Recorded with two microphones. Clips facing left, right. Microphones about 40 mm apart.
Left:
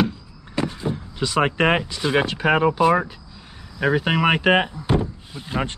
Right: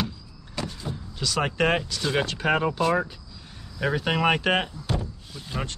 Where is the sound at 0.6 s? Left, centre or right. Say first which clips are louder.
Left 8 dB; left.